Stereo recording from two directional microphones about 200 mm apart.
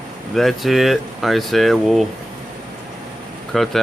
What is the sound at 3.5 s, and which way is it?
Speech, centre (ahead or behind).